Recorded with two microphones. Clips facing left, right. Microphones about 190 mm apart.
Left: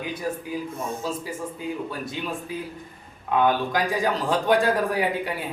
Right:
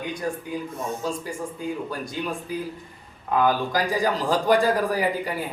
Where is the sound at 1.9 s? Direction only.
Centre (ahead or behind).